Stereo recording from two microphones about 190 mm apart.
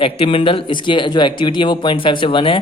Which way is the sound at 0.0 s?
30° left (ahead or behind).